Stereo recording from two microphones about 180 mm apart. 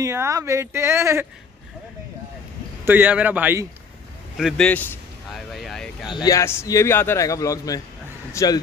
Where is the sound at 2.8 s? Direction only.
10° right (ahead or behind).